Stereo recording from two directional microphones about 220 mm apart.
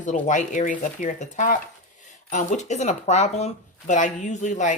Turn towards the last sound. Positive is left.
turn(degrees=35)  # may be behind; listen again after turning